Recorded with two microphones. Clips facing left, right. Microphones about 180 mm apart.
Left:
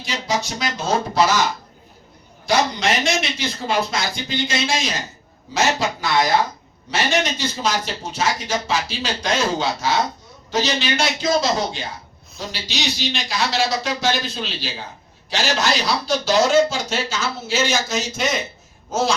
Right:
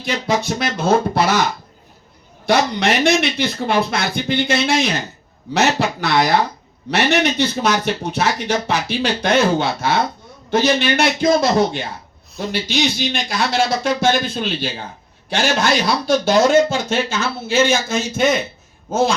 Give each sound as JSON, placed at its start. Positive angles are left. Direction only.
{"t": 0.0, "sound": "speech", "side_deg": -55}
{"t": 2.5, "sound": "speech", "side_deg": -60}